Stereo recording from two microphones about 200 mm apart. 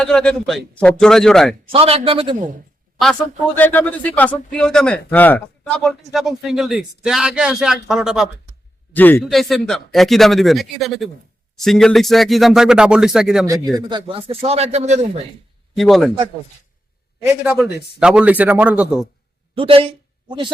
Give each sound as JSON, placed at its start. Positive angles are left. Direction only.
{"t": 0.0, "sound": "speech", "side_deg": 5}
{"t": 1.7, "sound": "speech", "side_deg": -30}
{"t": 3.6, "sound": "speech", "side_deg": 10}
{"t": 8.9, "sound": "speech", "side_deg": 10}
{"t": 13.5, "sound": "a man's voice", "side_deg": -20}
{"t": 15.7, "sound": "a man's voice", "side_deg": 0}
{"t": 17.4, "sound": "a man's voice", "side_deg": -5}
{"t": 19.5, "sound": "speech", "side_deg": -25}